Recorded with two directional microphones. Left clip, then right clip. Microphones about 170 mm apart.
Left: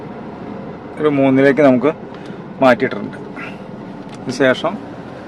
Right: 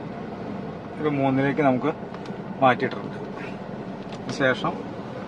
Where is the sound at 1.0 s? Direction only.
70° left (ahead or behind).